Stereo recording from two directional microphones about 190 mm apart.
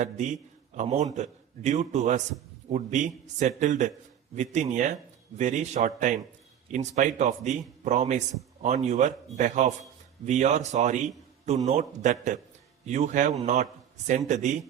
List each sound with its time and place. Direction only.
0.0 s a man's voice: 40° right (ahead or behind)